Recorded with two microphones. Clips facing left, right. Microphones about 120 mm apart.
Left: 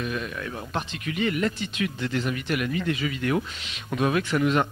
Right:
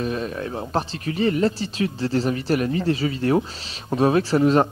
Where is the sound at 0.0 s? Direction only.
35° right (ahead or behind).